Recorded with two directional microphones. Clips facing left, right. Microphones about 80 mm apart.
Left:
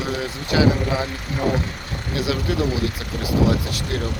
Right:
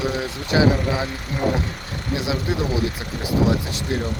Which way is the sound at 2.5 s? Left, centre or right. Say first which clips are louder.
Left 1 dB; right.